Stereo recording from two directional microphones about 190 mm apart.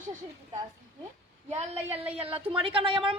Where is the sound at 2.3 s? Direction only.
30° right (ahead or behind).